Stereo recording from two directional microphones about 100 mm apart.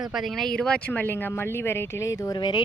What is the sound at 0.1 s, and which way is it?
Speech, centre (ahead or behind).